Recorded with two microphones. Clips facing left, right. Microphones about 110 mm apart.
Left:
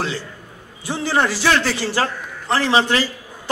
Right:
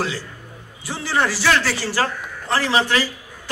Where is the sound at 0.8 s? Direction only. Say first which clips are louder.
Left 2 dB; 20° left (ahead or behind).